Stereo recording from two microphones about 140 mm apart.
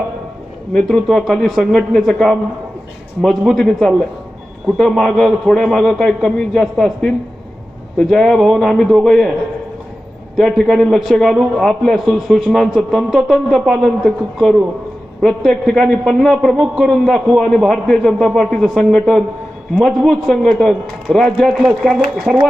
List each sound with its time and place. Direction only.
0.7 s a man's voice: 5° left (ahead or behind)
10.3 s a man's voice: centre (ahead or behind)